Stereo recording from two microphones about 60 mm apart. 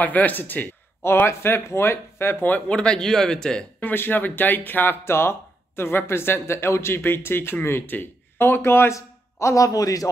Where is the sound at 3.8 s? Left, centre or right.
Left.